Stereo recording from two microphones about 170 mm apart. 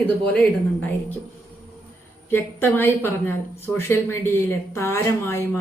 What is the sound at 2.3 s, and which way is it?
A woman's voice, 10° left (ahead or behind).